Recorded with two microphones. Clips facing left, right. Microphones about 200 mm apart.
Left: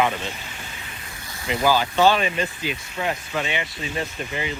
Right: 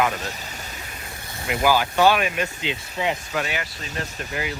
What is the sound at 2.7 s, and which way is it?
Speech, 25° right (ahead or behind).